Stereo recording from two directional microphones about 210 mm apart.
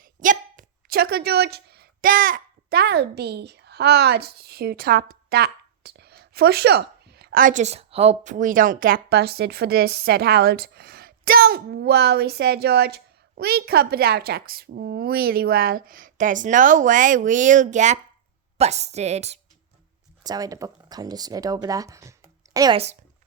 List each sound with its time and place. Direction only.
0.0 s a woman's voice: 40° right (ahead or behind)
20.2 s speech: 20° right (ahead or behind)